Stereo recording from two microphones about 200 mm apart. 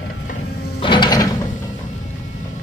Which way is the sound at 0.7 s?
25° left (ahead or behind).